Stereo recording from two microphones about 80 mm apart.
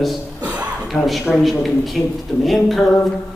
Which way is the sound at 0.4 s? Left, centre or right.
Centre.